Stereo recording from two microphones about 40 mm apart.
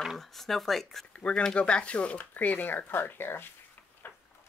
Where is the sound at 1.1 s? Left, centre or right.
Left.